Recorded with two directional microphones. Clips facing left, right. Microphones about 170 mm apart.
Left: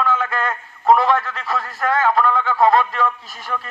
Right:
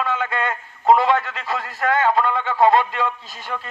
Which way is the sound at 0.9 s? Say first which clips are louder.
Left 1 dB; 20° right (ahead or behind).